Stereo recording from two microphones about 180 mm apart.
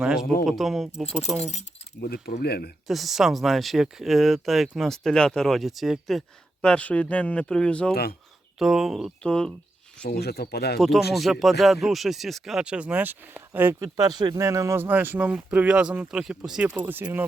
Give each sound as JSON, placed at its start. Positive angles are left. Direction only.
{"t": 0.0, "sound": "speech", "side_deg": -5}
{"t": 2.0, "sound": "speech", "side_deg": 60}
{"t": 2.8, "sound": "speech", "side_deg": 0}
{"t": 10.1, "sound": "speech", "side_deg": 60}
{"t": 10.8, "sound": "speech", "side_deg": 0}